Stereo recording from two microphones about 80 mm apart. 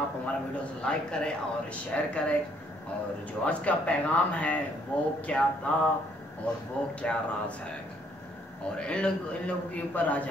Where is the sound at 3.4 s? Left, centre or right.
Centre.